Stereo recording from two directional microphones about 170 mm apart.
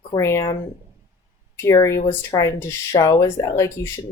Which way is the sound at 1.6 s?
15° left (ahead or behind).